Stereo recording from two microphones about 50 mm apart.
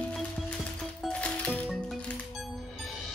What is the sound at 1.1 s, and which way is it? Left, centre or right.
Music, left.